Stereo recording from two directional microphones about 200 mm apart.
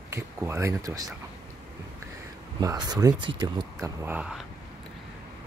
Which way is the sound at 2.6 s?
20° right (ahead or behind).